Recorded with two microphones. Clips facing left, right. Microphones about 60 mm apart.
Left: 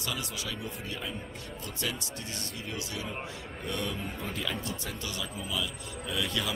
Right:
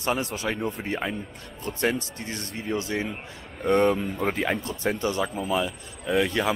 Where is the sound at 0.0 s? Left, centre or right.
Right.